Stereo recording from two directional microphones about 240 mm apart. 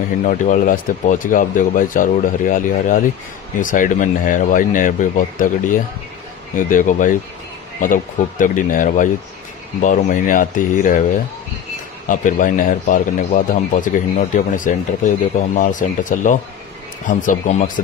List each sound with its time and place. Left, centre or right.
0.2 s speech: left
12.1 s speech: left